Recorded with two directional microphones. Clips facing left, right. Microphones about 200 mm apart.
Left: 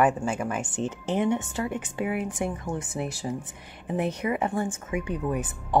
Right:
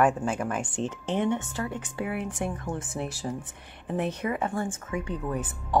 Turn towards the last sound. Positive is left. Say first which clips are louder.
# left 2 dB
turn(degrees=15)  # may be behind; listen again after turning